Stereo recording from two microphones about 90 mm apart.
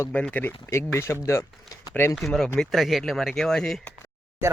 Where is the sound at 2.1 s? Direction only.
Centre (ahead or behind).